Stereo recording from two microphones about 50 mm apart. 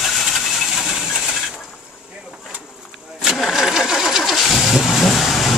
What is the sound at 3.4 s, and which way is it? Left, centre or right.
Vehicle, centre.